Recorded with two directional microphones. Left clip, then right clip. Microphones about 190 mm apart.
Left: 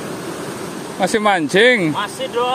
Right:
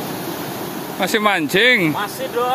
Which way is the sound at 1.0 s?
15° left (ahead or behind).